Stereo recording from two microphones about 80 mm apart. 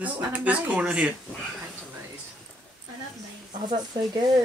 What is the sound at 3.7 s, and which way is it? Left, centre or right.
Speech, right.